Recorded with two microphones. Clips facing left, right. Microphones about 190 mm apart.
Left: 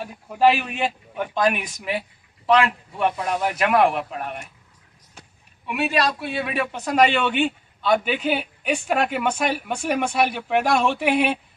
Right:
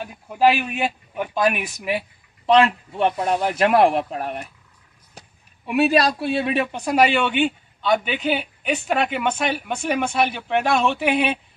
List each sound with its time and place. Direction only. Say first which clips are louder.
0.0 s speech: even; 5° right (ahead or behind); by 4.5 s 40° right (ahead or behind)
5.7 s a man's voice: right 5 dB; 40° right (ahead or behind); by 11.0 s 10° left (ahead or behind)